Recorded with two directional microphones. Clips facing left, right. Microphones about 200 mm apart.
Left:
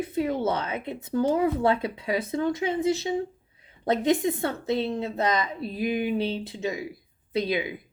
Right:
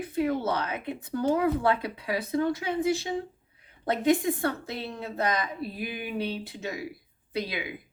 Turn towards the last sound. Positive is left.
turn(degrees=25)  # may be behind; listen again after turning